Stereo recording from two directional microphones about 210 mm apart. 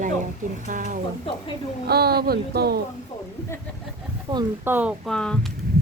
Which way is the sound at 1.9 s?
50° right (ahead or behind).